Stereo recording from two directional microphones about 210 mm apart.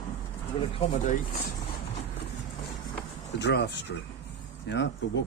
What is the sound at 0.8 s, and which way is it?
Speech, 30° left (ahead or behind).